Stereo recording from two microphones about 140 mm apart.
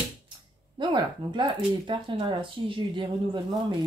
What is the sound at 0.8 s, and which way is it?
Speech, 35° right (ahead or behind).